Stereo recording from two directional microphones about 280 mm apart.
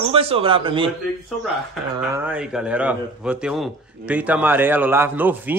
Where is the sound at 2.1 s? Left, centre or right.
Centre.